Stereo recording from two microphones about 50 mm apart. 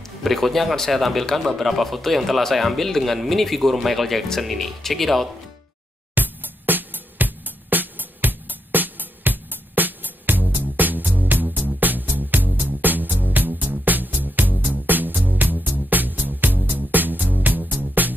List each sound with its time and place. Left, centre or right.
0.2 s speech: centre
6.1 s music: right